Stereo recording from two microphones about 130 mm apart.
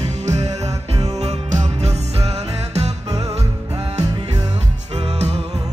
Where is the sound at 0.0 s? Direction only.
60° right (ahead or behind).